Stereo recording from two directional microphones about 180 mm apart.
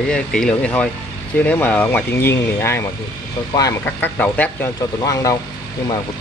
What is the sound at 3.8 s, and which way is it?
Speech, 10° left (ahead or behind).